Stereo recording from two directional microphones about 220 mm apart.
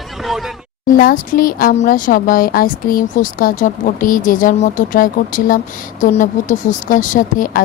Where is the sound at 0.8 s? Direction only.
40° left (ahead or behind).